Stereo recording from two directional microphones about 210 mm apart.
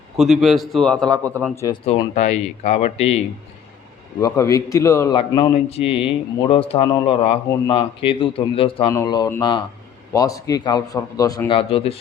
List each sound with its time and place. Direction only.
0.2 s a man's voice: centre (ahead or behind)
1.6 s a man's voice: 25° left (ahead or behind)
4.2 s a man's voice: 15° left (ahead or behind)